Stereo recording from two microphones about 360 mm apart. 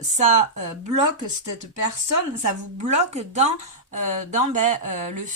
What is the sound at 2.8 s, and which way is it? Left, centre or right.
Speech, centre.